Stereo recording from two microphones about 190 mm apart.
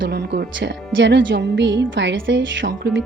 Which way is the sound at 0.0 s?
60° right (ahead or behind).